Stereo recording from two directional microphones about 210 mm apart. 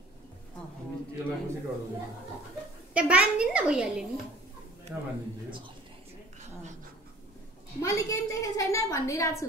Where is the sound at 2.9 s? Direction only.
5° right (ahead or behind).